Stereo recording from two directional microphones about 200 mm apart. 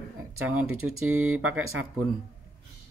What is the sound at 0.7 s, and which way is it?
Speech, 90° right.